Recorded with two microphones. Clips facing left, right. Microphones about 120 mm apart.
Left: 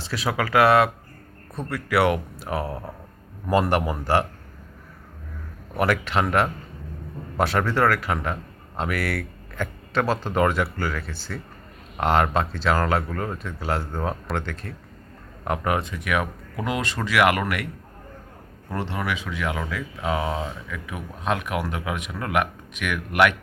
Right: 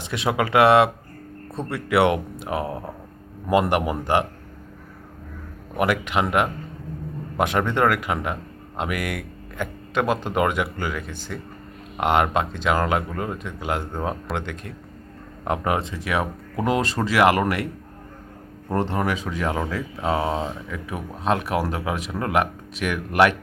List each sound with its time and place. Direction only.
0.0 s speech: 20° right (ahead or behind)
5.7 s speech: 15° right (ahead or behind); by 17.7 s 35° right (ahead or behind)
18.7 s speech: 40° right (ahead or behind)